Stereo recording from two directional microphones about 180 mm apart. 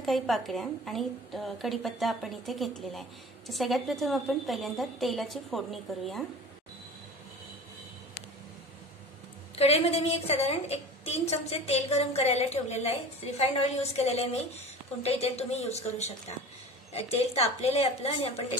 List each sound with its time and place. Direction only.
0.0 s a woman's voice: centre (ahead or behind)
9.6 s a woman's voice: 35° left (ahead or behind)